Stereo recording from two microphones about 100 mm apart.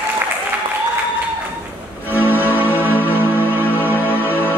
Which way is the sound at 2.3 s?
20° left (ahead or behind).